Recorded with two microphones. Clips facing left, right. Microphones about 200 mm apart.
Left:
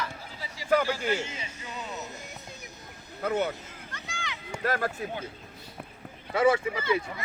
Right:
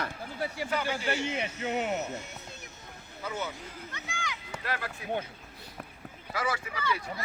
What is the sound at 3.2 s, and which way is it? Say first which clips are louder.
Speech: left 8 dB; 60° left (ahead or behind).